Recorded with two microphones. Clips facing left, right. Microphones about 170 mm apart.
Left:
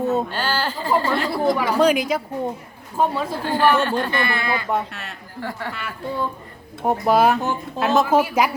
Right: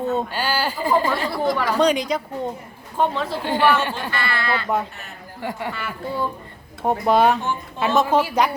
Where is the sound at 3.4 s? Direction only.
15° right (ahead or behind).